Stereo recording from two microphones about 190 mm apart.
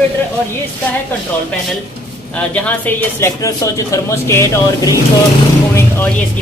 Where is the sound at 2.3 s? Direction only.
10° left (ahead or behind).